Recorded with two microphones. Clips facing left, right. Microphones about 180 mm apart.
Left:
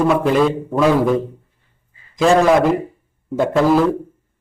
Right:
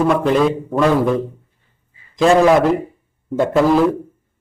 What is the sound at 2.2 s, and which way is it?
A man's voice, 5° left (ahead or behind).